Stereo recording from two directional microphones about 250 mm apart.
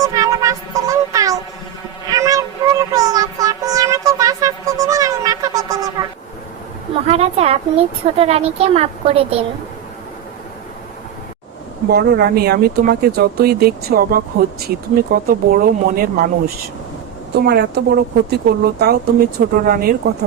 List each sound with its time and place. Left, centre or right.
0.0 s music: centre
2.0 s a sound: centre
6.9 s a woman's voice: right
11.9 s speech: right
17.3 s speech: right